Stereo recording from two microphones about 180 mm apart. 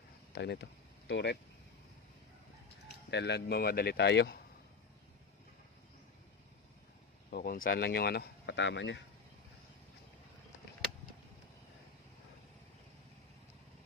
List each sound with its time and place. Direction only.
0.3 s speech: 70° left (ahead or behind)
3.1 s speech: 70° left (ahead or behind)
7.3 s speech: 55° left (ahead or behind); by 9.0 s 80° left